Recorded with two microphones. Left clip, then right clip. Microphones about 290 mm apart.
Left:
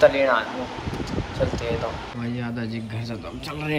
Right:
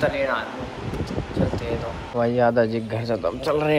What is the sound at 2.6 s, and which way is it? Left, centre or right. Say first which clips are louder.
Speech: right 11 dB; centre.